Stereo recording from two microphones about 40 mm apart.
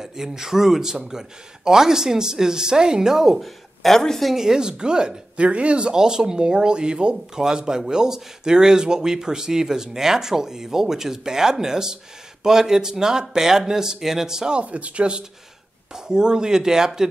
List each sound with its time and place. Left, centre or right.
0.0 s speech: centre
4.3 s speech: centre
5.4 s speech: right; by 14.5 s centre
14.5 s speech: right; by 17.1 s centre